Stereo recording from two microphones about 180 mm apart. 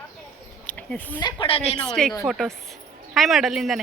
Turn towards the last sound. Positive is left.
turn(degrees=0)  # may be behind; listen again after turning